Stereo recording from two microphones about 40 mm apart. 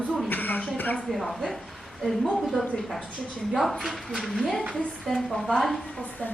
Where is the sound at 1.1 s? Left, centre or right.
Centre.